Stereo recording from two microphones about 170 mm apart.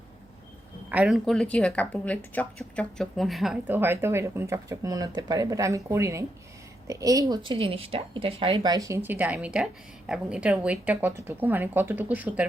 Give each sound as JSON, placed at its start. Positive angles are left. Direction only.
{"t": 0.9, "sound": "speech", "side_deg": -5}